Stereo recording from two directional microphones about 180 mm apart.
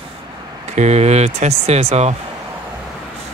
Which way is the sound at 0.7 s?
40° right (ahead or behind).